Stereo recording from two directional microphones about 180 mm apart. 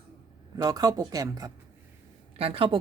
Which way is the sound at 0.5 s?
20° right (ahead or behind).